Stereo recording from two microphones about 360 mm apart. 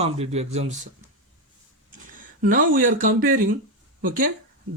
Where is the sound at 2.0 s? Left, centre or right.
Right.